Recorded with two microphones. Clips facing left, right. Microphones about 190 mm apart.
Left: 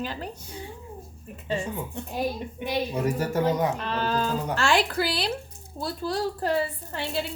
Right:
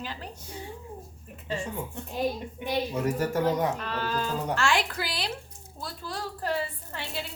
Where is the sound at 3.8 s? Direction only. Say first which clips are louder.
Left 4 dB; 25° left (ahead or behind).